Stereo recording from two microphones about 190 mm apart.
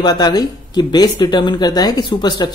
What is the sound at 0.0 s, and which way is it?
Speech, 20° left (ahead or behind).